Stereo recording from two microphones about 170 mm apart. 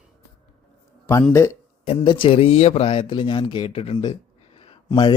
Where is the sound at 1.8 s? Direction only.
30° left (ahead or behind).